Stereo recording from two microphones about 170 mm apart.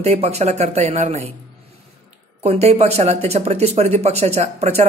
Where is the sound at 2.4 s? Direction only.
40° right (ahead or behind).